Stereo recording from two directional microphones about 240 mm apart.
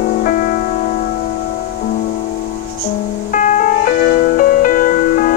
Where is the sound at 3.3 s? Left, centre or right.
Left.